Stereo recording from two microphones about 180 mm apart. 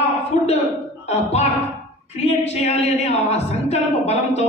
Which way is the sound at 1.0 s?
35° left (ahead or behind).